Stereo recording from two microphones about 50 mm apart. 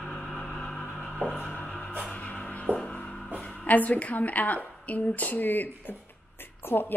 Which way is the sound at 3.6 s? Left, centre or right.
Left.